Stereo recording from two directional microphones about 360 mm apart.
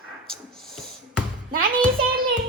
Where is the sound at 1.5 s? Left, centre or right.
Right.